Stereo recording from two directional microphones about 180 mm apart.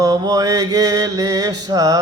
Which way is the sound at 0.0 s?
20° right (ahead or behind).